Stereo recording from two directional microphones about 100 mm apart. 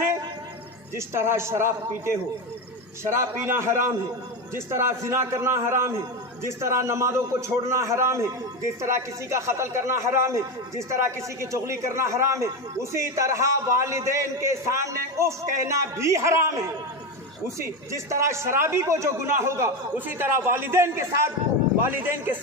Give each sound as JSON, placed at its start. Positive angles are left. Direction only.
{"t": 0.9, "sound": "a man's voice", "side_deg": -25}
{"t": 17.6, "sound": "a man's voice", "side_deg": -30}